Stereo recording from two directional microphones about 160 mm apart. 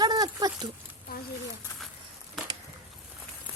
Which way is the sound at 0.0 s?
25° right (ahead or behind).